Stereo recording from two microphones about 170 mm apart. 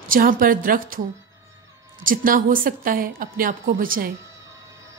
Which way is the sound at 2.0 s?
55° right (ahead or behind).